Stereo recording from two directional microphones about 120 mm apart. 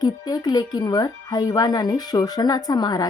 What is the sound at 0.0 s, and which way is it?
Speech, 35° left (ahead or behind).